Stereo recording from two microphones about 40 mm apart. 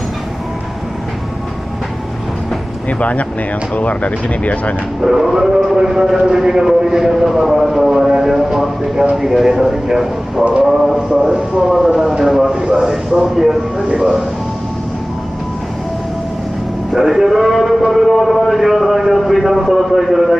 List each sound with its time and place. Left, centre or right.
2.9 s speech: left
5.0 s a man's voice: centre
16.9 s a man's voice: centre